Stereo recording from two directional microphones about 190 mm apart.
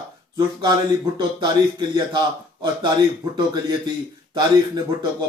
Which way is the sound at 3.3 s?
20° right (ahead or behind).